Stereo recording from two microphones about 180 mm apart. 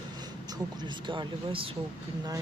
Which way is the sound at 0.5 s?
25° right (ahead or behind).